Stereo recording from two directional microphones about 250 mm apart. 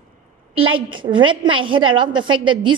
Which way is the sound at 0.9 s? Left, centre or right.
Centre.